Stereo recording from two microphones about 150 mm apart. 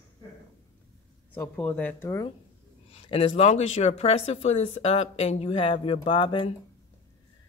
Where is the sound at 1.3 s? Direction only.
10° left (ahead or behind).